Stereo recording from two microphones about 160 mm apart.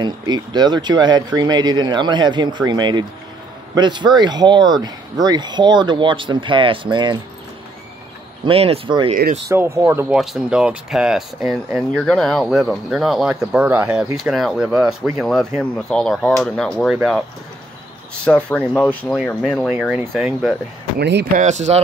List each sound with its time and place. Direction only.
0.0 s speech: 25° right (ahead or behind)
8.5 s speech: 35° right (ahead or behind)
9.5 s speech: 20° right (ahead or behind)
10.1 s speech: 5° right (ahead or behind)
18.2 s speech: 5° left (ahead or behind)
21.0 s speech: 90° right
21.4 s speech: 45° right (ahead or behind)